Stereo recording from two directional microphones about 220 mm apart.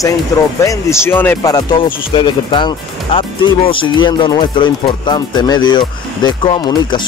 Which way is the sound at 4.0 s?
20° left (ahead or behind).